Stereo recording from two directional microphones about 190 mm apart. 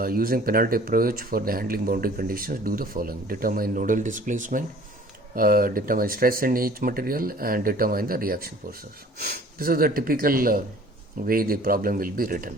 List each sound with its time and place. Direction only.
0.0 s speech: 50° right (ahead or behind)